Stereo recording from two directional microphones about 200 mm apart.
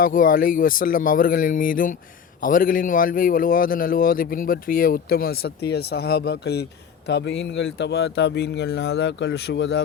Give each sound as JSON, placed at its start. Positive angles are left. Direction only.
{"t": 0.0, "sound": "a man's voice", "side_deg": 45}